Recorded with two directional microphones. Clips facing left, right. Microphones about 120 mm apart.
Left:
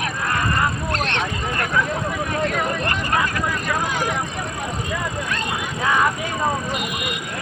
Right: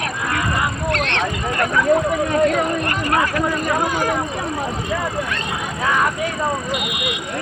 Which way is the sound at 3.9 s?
45° right (ahead or behind).